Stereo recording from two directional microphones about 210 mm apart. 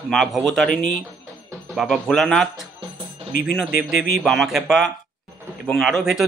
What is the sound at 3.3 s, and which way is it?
Speech, 45° left (ahead or behind).